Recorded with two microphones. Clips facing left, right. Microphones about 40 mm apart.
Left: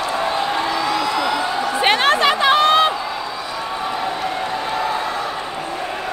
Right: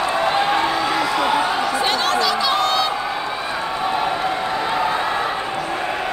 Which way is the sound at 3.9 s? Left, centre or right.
Right.